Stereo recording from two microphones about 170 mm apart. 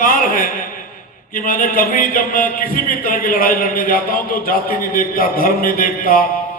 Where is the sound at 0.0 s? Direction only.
55° left (ahead or behind).